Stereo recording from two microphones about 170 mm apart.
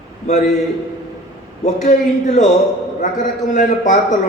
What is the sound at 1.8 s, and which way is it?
A man's voice, 45° left (ahead or behind).